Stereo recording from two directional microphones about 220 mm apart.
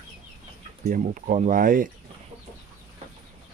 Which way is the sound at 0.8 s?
40° right (ahead or behind).